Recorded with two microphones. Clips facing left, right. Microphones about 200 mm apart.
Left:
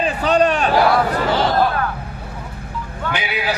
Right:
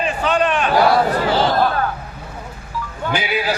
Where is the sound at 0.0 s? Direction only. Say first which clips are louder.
Left 2 dB; 40° left (ahead or behind).